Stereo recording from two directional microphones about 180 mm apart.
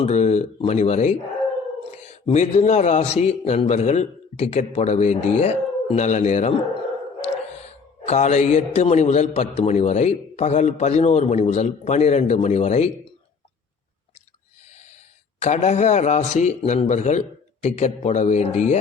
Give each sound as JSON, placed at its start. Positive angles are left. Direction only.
{"t": 0.0, "sound": "a man's voice", "side_deg": 40}
{"t": 2.2, "sound": "a man's voice", "side_deg": 40}
{"t": 8.0, "sound": "a man's voice", "side_deg": 40}
{"t": 15.4, "sound": "a man's voice", "side_deg": 40}